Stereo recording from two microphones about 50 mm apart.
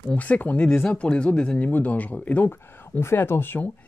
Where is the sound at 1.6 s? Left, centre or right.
Left.